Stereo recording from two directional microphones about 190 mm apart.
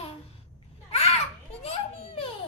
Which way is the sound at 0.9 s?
35° left (ahead or behind).